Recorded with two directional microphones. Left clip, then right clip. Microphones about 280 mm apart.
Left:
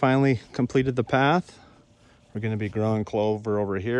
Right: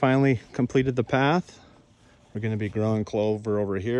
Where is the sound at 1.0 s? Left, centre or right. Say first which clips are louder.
Left 3 dB; centre.